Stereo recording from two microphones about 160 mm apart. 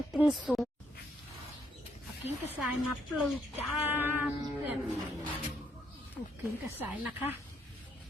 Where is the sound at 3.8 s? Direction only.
10° right (ahead or behind).